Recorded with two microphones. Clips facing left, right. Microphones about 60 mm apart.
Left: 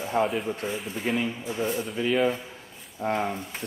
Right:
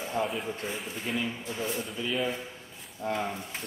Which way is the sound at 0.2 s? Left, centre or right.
Centre.